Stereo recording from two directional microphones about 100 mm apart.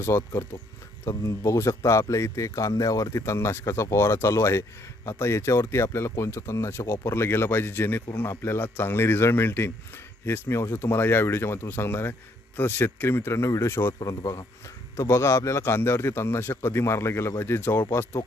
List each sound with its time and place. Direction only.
0.0 s a man's voice: 25° left (ahead or behind)